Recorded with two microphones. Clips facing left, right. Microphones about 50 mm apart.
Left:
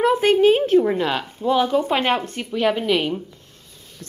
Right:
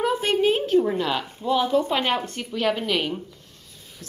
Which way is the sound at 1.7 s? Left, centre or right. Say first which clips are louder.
Left 3 dB; left.